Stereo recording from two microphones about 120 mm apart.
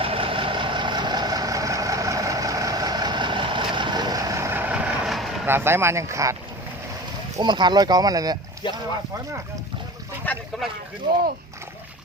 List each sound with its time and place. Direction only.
0.0 s vehicle: 50° right (ahead or behind); by 4.9 s 10° right (ahead or behind)
5.0 s vehicle: centre (ahead or behind)
5.5 s speech: 20° right (ahead or behind)
7.3 s speech: 40° right (ahead or behind)